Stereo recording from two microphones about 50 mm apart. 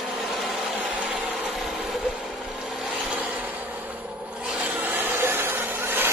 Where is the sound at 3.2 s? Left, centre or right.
Right.